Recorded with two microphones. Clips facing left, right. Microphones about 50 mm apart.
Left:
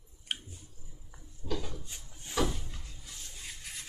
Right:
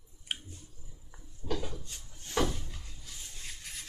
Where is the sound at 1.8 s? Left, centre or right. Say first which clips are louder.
Left 1 dB; centre.